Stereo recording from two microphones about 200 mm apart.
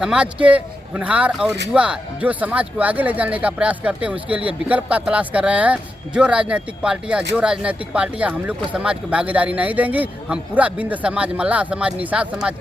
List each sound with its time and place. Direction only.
0.0 s speech: 5° right (ahead or behind)